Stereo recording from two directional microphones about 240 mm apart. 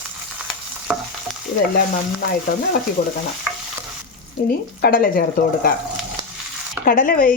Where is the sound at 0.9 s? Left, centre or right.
Centre.